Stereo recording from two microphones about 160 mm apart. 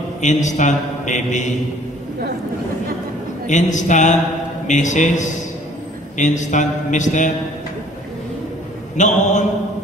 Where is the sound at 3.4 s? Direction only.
50° left (ahead or behind).